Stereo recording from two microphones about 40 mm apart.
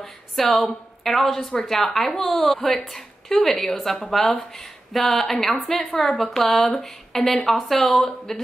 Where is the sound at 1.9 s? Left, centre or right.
Centre.